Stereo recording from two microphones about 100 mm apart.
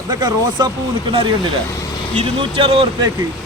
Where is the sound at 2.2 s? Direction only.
65° right (ahead or behind).